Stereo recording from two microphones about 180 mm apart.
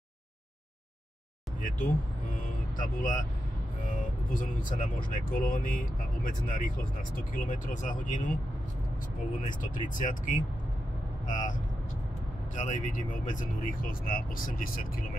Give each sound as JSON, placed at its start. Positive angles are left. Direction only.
{"t": 2.8, "sound": "speech", "side_deg": 45}
{"t": 9.4, "sound": "speech", "side_deg": 45}
{"t": 12.5, "sound": "speech", "side_deg": 45}